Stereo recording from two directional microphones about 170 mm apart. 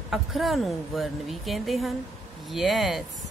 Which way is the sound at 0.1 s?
Centre (ahead or behind).